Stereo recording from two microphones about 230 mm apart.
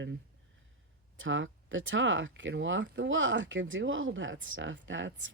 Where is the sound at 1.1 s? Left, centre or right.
Right.